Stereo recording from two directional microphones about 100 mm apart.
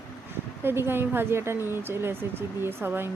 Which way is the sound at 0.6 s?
25° right (ahead or behind).